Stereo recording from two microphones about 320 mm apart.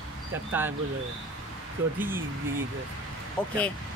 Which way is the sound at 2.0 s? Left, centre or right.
Centre.